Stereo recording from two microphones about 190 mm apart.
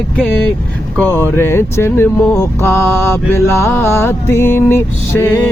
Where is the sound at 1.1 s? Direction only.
10° left (ahead or behind).